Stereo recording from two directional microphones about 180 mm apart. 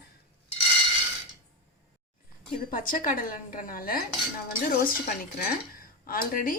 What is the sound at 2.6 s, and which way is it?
A woman's voice, 50° left (ahead or behind).